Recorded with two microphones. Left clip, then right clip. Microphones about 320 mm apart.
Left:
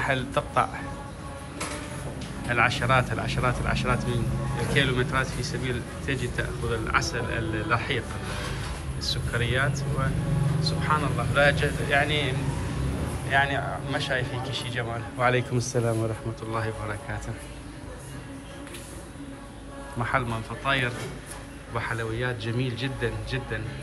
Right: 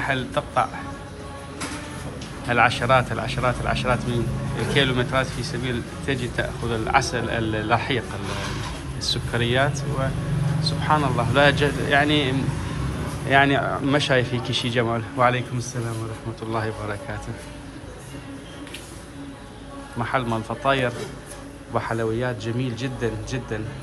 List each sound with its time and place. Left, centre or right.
0.0 s speech: centre
2.4 s speech: centre
9.0 s a man's voice: centre
20.0 s a man's voice: centre